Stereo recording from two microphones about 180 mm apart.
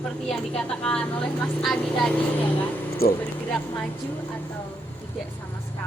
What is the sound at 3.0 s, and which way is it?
Speech, 55° left (ahead or behind).